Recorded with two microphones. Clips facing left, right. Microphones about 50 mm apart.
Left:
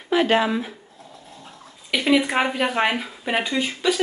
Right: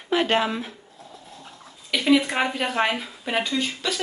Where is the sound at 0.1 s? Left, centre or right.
Centre.